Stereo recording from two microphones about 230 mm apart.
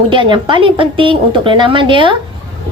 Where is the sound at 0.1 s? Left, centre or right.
Right.